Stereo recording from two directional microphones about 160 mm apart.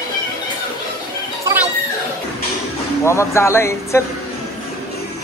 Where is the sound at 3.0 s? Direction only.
15° left (ahead or behind).